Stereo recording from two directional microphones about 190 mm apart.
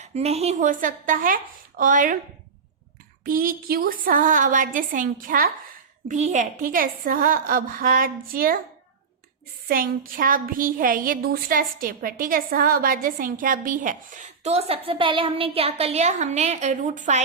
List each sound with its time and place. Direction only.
0.0 s a woman's voice: 35° right (ahead or behind)
3.2 s a woman's voice: 50° right (ahead or behind)
9.6 s a woman's voice: 50° right (ahead or behind)